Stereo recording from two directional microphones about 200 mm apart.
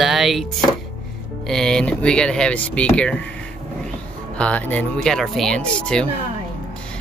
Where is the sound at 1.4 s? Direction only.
5° left (ahead or behind).